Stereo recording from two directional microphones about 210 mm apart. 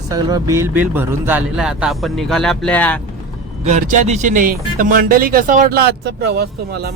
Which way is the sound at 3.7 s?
35° right (ahead or behind).